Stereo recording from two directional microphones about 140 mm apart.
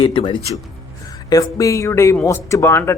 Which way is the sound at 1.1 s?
25° left (ahead or behind).